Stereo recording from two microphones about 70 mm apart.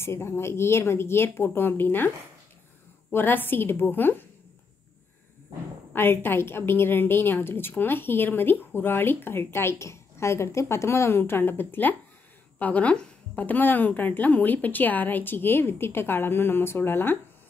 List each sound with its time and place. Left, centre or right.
0.0 s a woman's voice: left
5.9 s a woman's voice: left